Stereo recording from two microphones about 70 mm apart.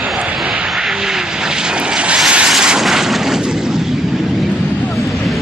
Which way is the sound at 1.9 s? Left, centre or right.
Centre.